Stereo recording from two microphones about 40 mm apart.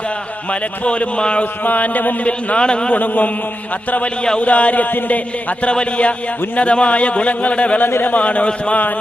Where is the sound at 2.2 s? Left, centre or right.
Left.